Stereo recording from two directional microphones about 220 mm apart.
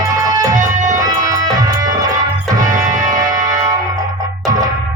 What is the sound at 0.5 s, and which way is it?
Music, 35° right (ahead or behind).